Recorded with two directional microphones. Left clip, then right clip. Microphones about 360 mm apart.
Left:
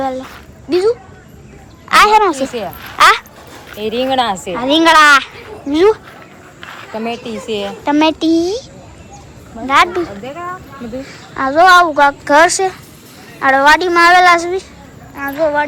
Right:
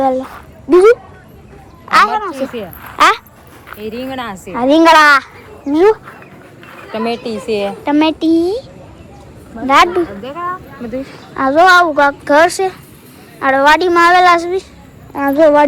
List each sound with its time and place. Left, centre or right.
0.0 s speech: centre
1.9 s speech: centre
2.8 s a sound: centre
4.1 s a woman's voice: left
4.5 s speech: centre
6.6 s a sound: centre
6.9 s a woman's voice: right
7.9 s speech: centre
9.6 s a woman's voice: centre